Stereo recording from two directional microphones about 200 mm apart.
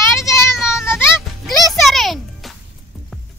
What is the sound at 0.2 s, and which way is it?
Sheep, 15° left (ahead or behind).